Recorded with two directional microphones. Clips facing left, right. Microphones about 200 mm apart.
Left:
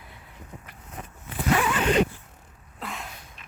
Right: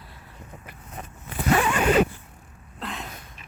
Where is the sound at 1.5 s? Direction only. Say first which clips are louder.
Right 2 dB; 45° right (ahead or behind).